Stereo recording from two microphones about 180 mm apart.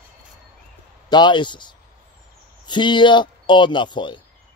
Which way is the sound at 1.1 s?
25° left (ahead or behind).